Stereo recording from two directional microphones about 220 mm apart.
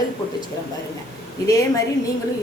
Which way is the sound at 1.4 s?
15° left (ahead or behind).